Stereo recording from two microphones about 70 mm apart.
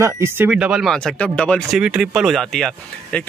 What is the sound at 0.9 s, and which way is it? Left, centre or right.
Speech, centre.